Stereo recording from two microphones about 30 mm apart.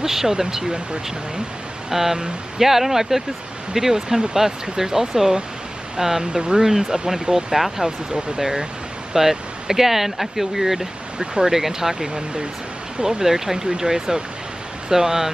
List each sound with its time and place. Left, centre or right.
0.0 s speech: centre
1.9 s speech: centre
6.3 s speech: right; by 10.9 s centre
11.1 s speech: right
11.5 s speech: centre